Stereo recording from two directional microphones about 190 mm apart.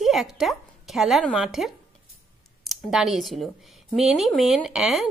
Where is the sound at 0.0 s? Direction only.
Centre (ahead or behind).